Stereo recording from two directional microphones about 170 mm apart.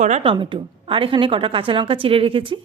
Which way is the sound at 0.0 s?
40° right (ahead or behind).